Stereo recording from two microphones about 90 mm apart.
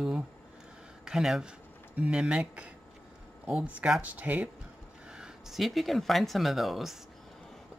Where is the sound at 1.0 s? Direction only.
5° right (ahead or behind).